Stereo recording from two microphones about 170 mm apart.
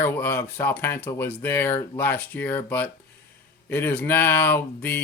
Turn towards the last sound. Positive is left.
turn(degrees=10)  # may be behind; listen again after turning